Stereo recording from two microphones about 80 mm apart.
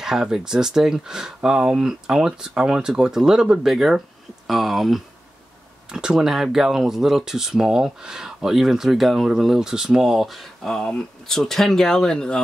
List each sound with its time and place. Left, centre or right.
0.0 s speech: centre